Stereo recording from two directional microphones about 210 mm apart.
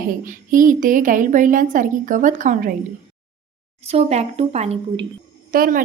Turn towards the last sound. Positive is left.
turn(degrees=-40)  # may be behind; listen again after turning